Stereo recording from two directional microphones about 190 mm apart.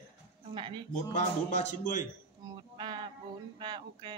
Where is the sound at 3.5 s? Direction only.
25° right (ahead or behind).